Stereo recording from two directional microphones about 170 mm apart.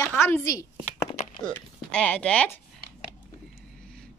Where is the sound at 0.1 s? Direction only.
15° left (ahead or behind).